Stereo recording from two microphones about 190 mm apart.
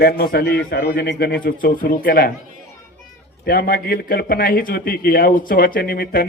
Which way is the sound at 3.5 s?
50° left (ahead or behind).